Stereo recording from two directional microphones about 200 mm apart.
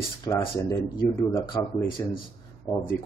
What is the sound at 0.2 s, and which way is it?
Speech, 20° left (ahead or behind).